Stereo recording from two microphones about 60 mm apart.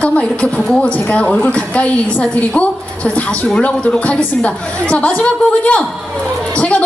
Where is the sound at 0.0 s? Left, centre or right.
Left.